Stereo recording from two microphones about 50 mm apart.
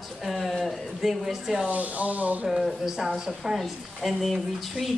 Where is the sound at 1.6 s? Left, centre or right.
Right.